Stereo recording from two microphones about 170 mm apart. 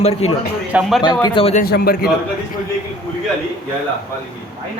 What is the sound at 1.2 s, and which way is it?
Speech, 30° left (ahead or behind).